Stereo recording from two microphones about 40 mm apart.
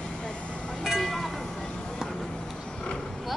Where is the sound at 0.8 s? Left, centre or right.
Centre.